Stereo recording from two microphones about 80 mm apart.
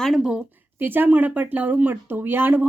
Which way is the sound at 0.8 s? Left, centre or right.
Right.